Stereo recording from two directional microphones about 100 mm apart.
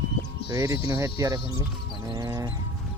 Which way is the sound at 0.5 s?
35° right (ahead or behind).